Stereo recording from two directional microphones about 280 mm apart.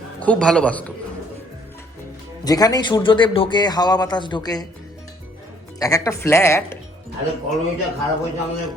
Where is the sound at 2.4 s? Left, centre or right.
Centre.